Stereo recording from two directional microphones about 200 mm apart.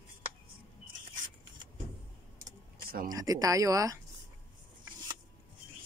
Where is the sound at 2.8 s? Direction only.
50° right (ahead or behind).